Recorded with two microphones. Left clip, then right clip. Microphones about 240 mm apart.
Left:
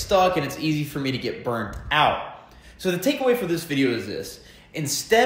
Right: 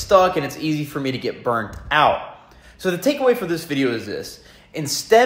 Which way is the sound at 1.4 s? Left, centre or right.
Right.